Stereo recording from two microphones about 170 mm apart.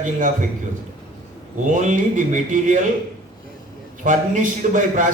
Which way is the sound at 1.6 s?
50° right (ahead or behind).